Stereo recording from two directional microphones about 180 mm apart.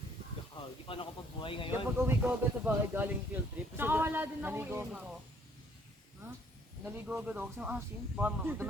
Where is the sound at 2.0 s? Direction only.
10° right (ahead or behind).